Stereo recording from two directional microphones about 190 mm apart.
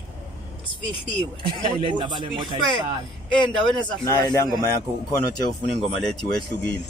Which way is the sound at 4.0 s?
20° left (ahead or behind).